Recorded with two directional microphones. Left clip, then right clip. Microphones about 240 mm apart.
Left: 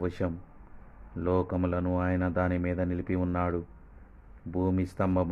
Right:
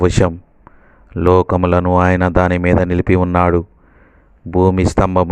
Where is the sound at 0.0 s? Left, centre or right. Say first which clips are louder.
Right 18 dB; right.